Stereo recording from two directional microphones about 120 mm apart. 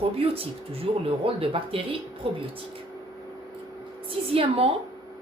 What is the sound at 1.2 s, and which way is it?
Speech, 50° right (ahead or behind).